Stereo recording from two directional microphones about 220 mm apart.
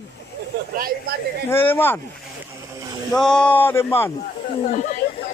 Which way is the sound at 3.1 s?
5° left (ahead or behind).